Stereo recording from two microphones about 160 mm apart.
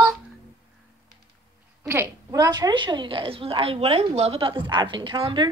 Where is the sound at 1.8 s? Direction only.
15° right (ahead or behind).